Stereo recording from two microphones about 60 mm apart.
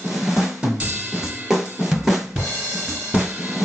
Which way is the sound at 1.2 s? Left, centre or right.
Centre.